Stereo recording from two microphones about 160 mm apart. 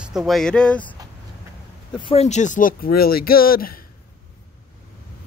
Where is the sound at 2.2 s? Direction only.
50° left (ahead or behind); by 3.7 s 65° left (ahead or behind).